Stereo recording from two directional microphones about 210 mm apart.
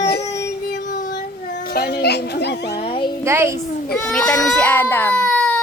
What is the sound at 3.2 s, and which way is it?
Speech, 15° right (ahead or behind).